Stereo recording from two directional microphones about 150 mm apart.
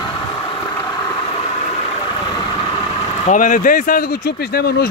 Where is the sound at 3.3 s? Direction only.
60° left (ahead or behind).